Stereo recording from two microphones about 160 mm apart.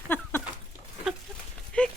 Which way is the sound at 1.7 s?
5° left (ahead or behind).